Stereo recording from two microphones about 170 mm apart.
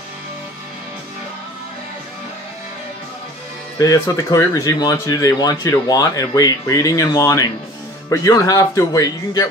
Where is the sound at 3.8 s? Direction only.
20° left (ahead or behind).